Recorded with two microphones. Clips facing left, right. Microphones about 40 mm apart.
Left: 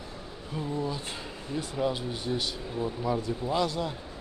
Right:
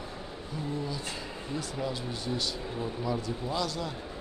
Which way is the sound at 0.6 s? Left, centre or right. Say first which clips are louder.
Left 3 dB; left.